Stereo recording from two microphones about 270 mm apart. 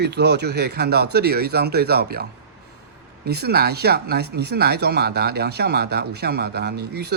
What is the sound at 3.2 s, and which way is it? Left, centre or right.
Speech, right.